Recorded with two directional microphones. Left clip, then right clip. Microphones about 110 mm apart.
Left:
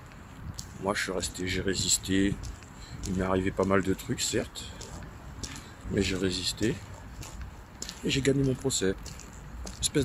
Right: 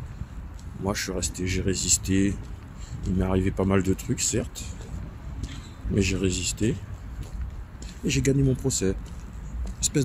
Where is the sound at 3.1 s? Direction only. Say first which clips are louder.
Right 1 dB; 25° right (ahead or behind).